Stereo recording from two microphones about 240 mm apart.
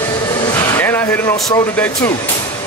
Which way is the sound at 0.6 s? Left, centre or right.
Centre.